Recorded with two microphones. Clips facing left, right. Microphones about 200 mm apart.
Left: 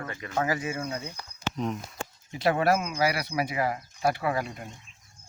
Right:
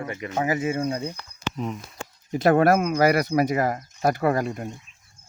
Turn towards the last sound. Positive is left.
turn(degrees=-45)  # may be behind; listen again after turning